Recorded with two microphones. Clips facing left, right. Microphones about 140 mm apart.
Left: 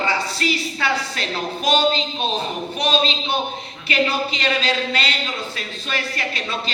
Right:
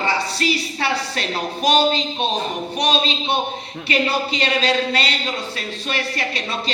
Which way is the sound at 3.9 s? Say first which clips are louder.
Even; 35° right (ahead or behind).